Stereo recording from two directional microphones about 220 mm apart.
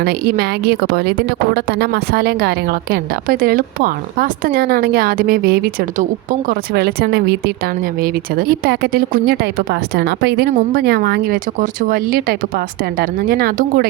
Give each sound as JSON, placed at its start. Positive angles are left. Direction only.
{"t": 0.0, "sound": "speech", "side_deg": -45}